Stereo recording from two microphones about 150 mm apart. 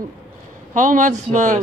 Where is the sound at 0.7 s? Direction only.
55° right (ahead or behind).